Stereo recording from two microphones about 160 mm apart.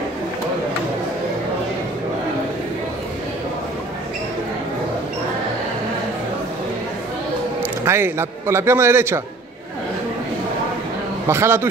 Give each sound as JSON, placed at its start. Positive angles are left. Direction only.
{"t": 7.8, "sound": "a man's voice", "side_deg": -15}
{"t": 11.2, "sound": "a man's voice", "side_deg": -15}